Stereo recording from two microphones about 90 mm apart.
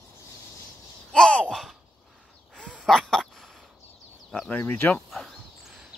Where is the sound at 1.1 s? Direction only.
10° left (ahead or behind).